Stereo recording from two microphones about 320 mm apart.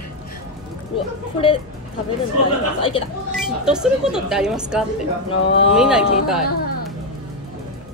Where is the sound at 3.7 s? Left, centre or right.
Centre.